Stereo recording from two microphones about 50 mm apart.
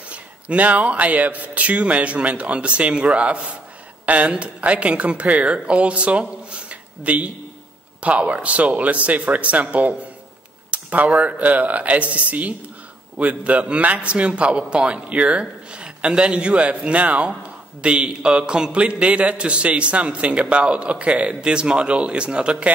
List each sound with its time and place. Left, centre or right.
0.1 s a man's voice: right